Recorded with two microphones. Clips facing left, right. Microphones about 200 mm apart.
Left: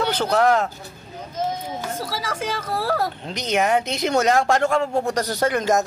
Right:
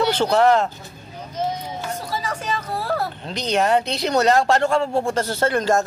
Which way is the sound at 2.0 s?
90° left.